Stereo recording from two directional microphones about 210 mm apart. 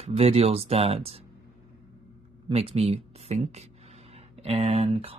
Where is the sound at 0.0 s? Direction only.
30° right (ahead or behind).